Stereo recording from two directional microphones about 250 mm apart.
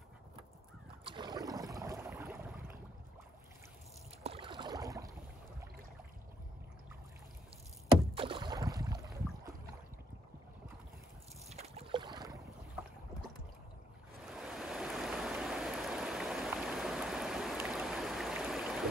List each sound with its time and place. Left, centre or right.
1.0 s boat: centre
4.2 s boat: right
8.1 s boat: right
11.4 s boat: right
14.3 s stream: centre